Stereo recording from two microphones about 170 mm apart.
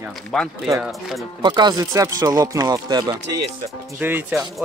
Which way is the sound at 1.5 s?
25° right (ahead or behind).